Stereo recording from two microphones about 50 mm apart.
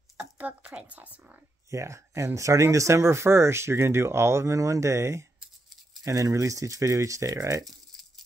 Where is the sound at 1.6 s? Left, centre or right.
Right.